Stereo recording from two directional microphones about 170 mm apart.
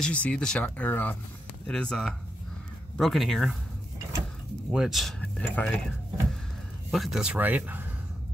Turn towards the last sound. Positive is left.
turn(degrees=-10)  # may be behind; listen again after turning